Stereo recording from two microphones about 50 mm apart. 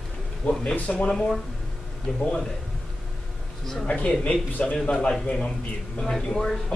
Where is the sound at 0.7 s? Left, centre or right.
Left.